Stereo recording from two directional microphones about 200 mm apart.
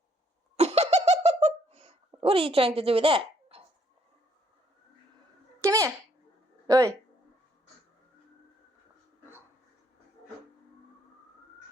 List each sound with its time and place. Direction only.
0.5 s laughter: 30° right (ahead or behind)
5.5 s a sound: 15° right (ahead or behind)
6.7 s speech: 15° right (ahead or behind)